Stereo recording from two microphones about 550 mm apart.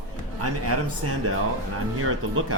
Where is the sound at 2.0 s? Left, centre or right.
Right.